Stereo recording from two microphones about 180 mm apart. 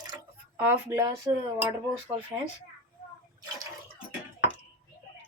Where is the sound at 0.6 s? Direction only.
10° right (ahead or behind).